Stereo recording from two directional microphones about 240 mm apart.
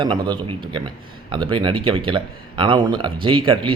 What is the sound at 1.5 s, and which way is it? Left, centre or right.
Speech, right.